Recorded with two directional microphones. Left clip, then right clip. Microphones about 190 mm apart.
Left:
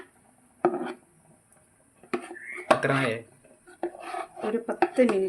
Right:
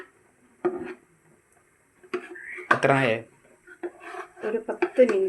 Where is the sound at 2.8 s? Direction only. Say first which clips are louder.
Right 5 dB; 25° right (ahead or behind).